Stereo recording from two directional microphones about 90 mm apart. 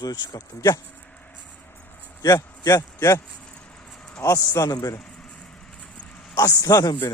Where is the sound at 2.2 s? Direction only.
40° left (ahead or behind).